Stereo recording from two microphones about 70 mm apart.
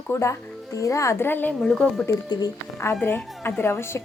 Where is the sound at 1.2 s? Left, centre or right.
Left.